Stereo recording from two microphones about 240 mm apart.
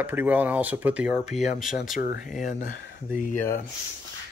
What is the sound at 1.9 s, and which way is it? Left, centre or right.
Speech, left.